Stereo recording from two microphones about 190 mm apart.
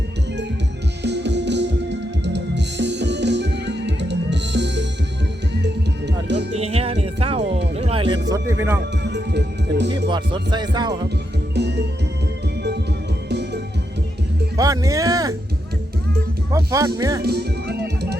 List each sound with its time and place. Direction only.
1.0 s music: 65° right (ahead or behind)
6.5 s music: 35° right (ahead or behind)
8.3 s speech: 15° right (ahead or behind)
9.0 s music: 60° right (ahead or behind)
10.1 s music: 25° right (ahead or behind)
11.5 s music: 65° right (ahead or behind)
14.5 s speech: 20° right (ahead or behind)
16.5 s speech: 15° right (ahead or behind)
17.2 s music: 60° right (ahead or behind)